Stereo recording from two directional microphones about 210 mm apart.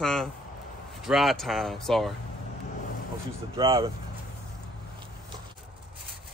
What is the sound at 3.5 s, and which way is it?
Speech, 20° right (ahead or behind).